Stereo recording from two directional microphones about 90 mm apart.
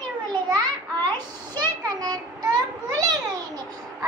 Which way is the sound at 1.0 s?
50° right (ahead or behind).